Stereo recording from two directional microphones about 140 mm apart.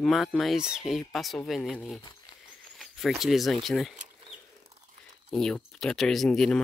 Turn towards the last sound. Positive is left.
turn(degrees=0)  # may be behind; listen again after turning